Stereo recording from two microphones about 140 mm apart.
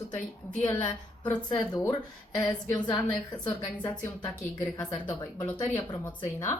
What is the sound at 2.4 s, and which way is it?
Speech, 30° left (ahead or behind).